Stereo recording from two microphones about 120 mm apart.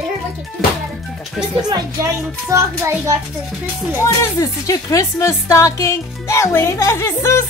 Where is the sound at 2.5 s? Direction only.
30° right (ahead or behind).